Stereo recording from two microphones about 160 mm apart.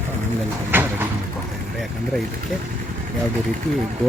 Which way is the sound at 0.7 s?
10° right (ahead or behind).